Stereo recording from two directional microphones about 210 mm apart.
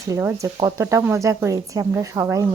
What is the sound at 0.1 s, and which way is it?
Speech, 15° right (ahead or behind).